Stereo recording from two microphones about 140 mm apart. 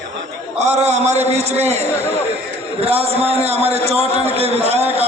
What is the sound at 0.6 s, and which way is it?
A man's voice, 55° right (ahead or behind).